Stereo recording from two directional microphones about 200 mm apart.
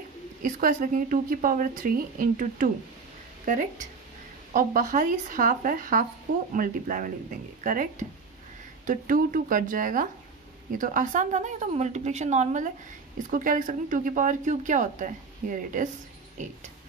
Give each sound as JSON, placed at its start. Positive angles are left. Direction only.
{"t": 0.4, "sound": "a woman's voice", "side_deg": -45}